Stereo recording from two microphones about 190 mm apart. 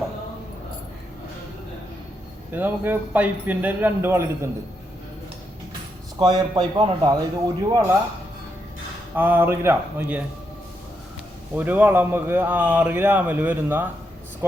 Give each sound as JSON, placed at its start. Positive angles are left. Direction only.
{"t": 2.5, "sound": "a man's voice", "side_deg": -10}
{"t": 6.1, "sound": "a man's voice", "side_deg": -20}
{"t": 9.1, "sound": "a man's voice", "side_deg": -10}
{"t": 11.5, "sound": "a man's voice", "side_deg": -10}